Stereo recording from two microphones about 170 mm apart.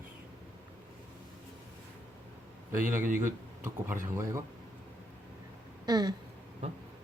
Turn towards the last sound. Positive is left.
turn(degrees=-25)  # may be behind; listen again after turning